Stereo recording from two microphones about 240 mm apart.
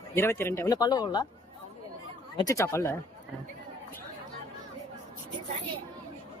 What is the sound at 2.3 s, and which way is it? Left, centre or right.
Speech, centre.